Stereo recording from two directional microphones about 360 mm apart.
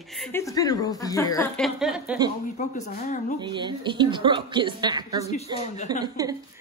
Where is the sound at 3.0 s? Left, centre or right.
Left.